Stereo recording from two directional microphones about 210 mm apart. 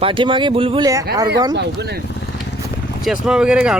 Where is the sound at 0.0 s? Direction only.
25° right (ahead or behind).